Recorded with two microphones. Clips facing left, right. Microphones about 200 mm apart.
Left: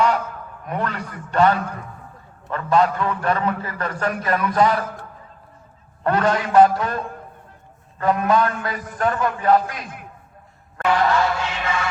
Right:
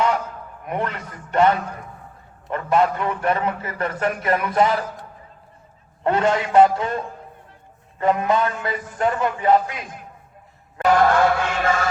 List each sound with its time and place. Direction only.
0.6 s a man's voice: 20° right (ahead or behind)
6.0 s a man's voice: 25° right (ahead or behind)
10.8 s music: 50° right (ahead or behind)